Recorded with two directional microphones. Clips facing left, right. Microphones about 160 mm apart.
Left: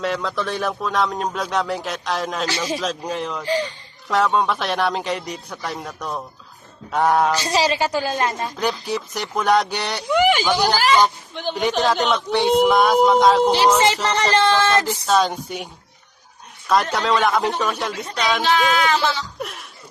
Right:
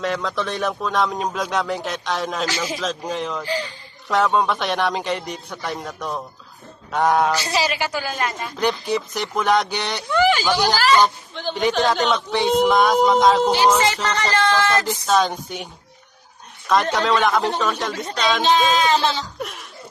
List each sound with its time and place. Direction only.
0.0 s speech: centre (ahead or behind)
2.5 s a woman's voice: 30° left (ahead or behind)
3.1 s speech: 5° left (ahead or behind)
3.4 s a woman's voice: 30° left (ahead or behind)
4.1 s speech: centre (ahead or behind)
7.4 s a woman's voice: 35° left (ahead or behind)
8.5 s speech: centre (ahead or behind)
13.7 s music: 30° left (ahead or behind)
14.8 s speech: centre (ahead or behind)
18.4 s speech: 20° right (ahead or behind)
19.4 s chuckle: centre (ahead or behind)